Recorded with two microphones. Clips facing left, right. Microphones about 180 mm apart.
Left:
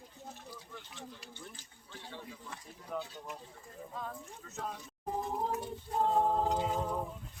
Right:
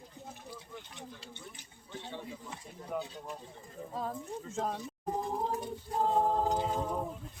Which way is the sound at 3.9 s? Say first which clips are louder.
Right 7 dB; 35° right (ahead or behind).